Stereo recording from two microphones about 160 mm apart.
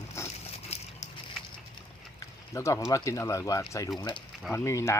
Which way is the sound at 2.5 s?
20° left (ahead or behind).